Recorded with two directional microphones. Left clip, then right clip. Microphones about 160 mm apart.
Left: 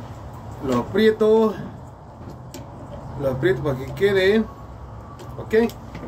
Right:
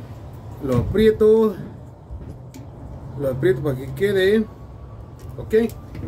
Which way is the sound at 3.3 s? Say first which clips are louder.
Right 2 dB; 40° right (ahead or behind).